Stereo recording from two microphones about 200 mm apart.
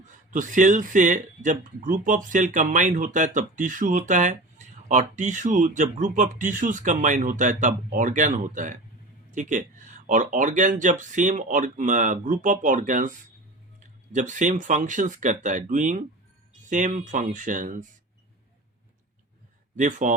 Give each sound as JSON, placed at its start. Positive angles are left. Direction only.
{"t": 0.3, "sound": "speech", "side_deg": -40}
{"t": 19.7, "sound": "speech", "side_deg": -40}